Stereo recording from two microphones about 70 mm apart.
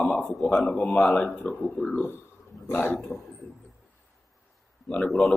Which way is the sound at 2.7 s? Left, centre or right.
Left.